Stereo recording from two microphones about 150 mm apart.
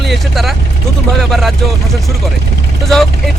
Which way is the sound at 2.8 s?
Centre (ahead or behind).